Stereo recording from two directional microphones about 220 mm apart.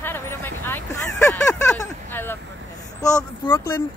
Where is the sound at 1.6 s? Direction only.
10° left (ahead or behind).